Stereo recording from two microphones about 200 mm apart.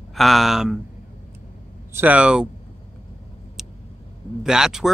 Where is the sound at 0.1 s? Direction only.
Centre (ahead or behind).